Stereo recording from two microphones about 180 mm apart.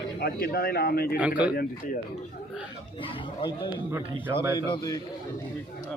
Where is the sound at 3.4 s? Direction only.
25° left (ahead or behind).